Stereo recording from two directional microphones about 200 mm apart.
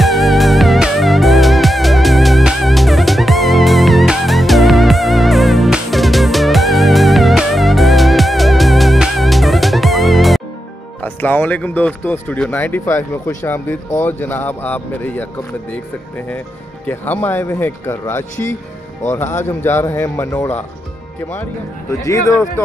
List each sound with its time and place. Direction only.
0.0 s music: centre (ahead or behind)
11.0 s speech: 10° left (ahead or behind)
16.8 s speech: 10° left (ahead or behind)
22.0 s speech: 15° left (ahead or behind)